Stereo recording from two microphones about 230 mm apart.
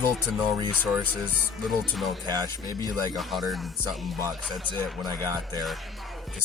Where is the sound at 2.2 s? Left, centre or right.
Centre.